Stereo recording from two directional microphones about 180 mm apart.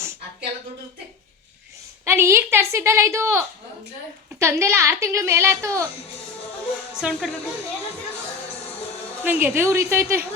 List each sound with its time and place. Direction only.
2.0 s speech: 15° right (ahead or behind)
6.9 s speech: centre (ahead or behind)
9.2 s speech: 10° right (ahead or behind)